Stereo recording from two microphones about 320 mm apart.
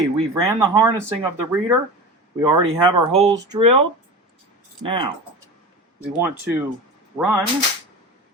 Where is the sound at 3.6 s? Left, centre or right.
Right.